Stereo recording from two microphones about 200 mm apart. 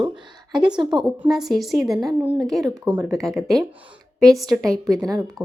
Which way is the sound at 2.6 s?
20° right (ahead or behind).